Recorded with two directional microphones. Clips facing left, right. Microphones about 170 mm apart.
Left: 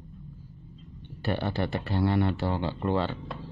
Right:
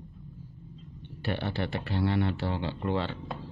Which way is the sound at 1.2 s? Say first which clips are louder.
Left 3 dB; 40° left (ahead or behind).